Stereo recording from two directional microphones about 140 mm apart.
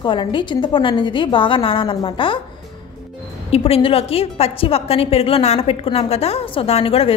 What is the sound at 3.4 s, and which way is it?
A woman's voice, 45° left (ahead or behind).